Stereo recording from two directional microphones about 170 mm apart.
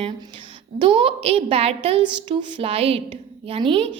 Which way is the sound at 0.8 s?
30° right (ahead or behind).